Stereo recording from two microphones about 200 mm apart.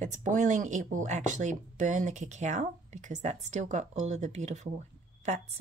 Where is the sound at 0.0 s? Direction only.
40° right (ahead or behind).